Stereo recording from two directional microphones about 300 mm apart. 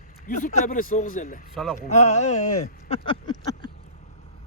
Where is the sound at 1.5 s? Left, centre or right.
Centre.